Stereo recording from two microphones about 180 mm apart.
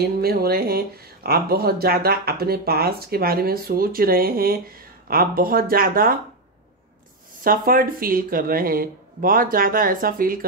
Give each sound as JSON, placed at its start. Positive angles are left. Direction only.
{"t": 0.0, "sound": "speech", "side_deg": -60}
{"t": 7.4, "sound": "speech", "side_deg": -55}